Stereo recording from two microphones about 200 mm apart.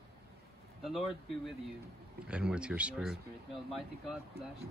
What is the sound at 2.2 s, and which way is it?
Speech, 5° right (ahead or behind).